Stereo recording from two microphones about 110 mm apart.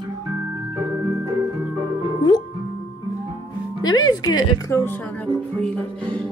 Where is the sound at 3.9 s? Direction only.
35° left (ahead or behind).